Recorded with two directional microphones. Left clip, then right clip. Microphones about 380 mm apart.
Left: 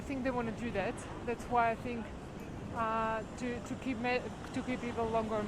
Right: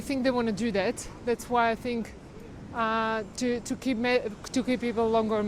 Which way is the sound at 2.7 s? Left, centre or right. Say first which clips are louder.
Right 6 dB; right.